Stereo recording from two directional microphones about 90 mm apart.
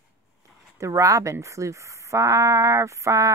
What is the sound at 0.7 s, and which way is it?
Speech, 35° right (ahead or behind).